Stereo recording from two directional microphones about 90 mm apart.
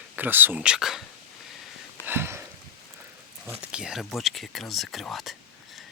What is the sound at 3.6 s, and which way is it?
Speech, 10° right (ahead or behind).